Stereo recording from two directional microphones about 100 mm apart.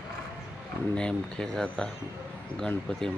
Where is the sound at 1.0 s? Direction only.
5° left (ahead or behind).